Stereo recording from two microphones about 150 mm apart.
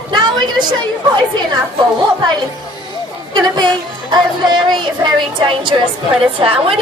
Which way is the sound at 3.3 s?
30° right (ahead or behind).